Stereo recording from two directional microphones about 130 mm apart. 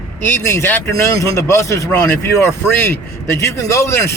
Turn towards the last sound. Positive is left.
turn(degrees=20)  # may be behind; listen again after turning